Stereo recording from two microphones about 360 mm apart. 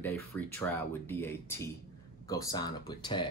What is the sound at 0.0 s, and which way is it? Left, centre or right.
Speech, centre.